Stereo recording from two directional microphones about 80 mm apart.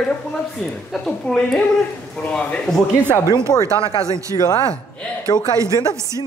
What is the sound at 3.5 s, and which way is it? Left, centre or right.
Speech, left.